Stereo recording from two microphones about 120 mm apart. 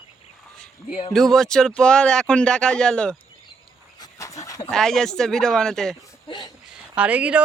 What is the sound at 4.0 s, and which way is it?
Dog, 25° left (ahead or behind).